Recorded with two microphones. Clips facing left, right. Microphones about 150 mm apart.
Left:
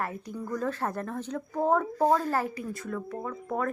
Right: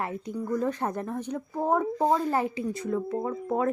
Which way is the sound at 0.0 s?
20° right (ahead or behind).